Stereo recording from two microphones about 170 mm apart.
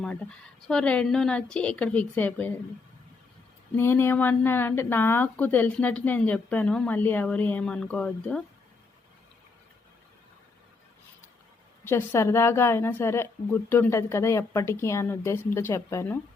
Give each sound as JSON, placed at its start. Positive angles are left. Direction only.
{"t": 0.0, "sound": "a woman's voice", "side_deg": 5}
{"t": 3.8, "sound": "a woman's voice", "side_deg": 15}
{"t": 11.9, "sound": "a woman's voice", "side_deg": 15}